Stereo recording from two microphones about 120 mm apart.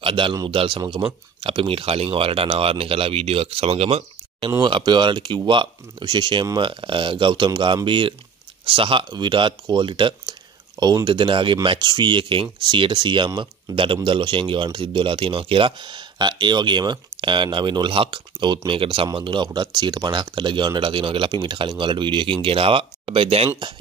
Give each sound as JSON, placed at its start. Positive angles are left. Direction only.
{"t": 0.0, "sound": "speech", "side_deg": -45}
{"t": 4.5, "sound": "speech", "side_deg": -40}